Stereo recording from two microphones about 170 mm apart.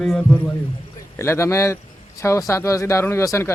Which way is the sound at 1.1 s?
15° left (ahead or behind).